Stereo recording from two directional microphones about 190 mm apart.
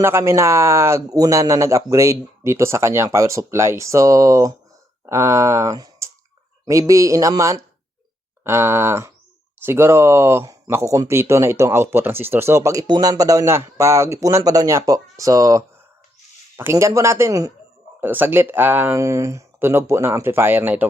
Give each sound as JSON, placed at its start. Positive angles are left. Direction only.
{"t": 0.0, "sound": "speech", "side_deg": -15}